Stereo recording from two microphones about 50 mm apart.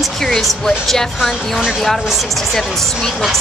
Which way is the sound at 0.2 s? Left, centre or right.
Centre.